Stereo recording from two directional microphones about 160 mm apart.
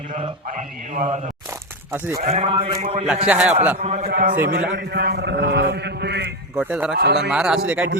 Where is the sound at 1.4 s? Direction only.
15° right (ahead or behind).